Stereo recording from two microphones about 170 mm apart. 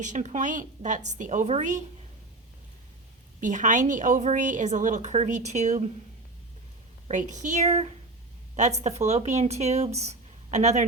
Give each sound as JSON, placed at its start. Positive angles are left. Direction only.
{"t": 0.0, "sound": "a woman's voice", "side_deg": -45}
{"t": 3.4, "sound": "a woman's voice", "side_deg": -50}
{"t": 7.1, "sound": "a woman's voice", "side_deg": -45}